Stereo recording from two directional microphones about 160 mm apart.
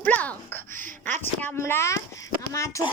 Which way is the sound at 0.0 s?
10° left (ahead or behind).